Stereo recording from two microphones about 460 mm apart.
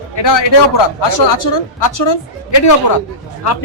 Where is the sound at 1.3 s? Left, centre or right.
Left.